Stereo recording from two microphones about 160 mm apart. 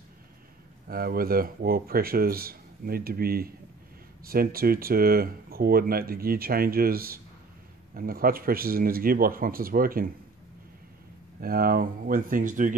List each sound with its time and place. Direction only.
0.8 s speech: 70° right (ahead or behind)
11.4 s speech: 65° right (ahead or behind)